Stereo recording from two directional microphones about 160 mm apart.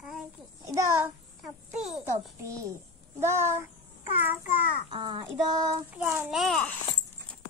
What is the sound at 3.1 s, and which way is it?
Speech, 15° right (ahead or behind).